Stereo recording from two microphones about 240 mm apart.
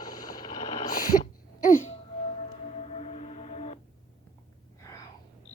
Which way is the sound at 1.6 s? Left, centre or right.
Left.